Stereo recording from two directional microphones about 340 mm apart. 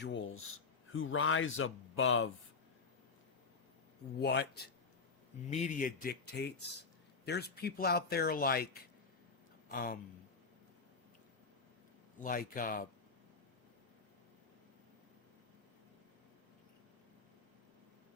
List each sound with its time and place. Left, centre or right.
0.0 s speech: left
4.2 s speech: left
12.2 s speech: left